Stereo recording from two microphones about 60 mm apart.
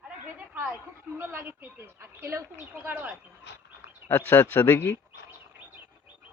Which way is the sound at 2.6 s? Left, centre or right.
Right.